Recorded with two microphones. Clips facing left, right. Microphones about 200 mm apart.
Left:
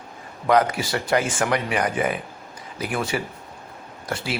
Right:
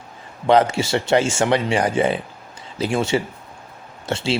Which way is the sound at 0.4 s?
30° right (ahead or behind).